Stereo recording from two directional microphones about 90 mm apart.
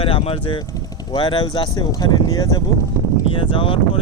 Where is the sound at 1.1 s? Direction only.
55° left (ahead or behind).